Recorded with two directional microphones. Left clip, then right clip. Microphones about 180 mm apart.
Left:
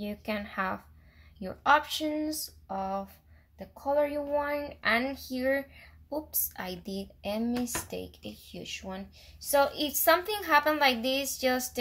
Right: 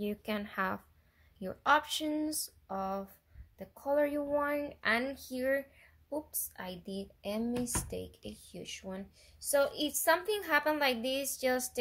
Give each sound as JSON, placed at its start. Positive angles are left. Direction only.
{"t": 0.0, "sound": "speech", "side_deg": -25}